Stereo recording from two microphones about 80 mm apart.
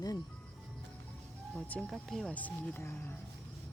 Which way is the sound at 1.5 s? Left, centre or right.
Centre.